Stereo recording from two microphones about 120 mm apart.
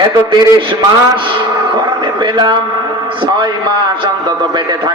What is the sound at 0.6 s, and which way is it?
A man's voice, 45° right (ahead or behind).